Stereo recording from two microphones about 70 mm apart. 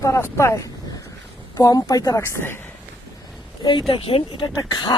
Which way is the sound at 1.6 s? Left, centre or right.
Left.